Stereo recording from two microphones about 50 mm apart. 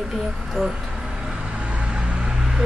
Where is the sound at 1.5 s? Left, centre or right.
Right.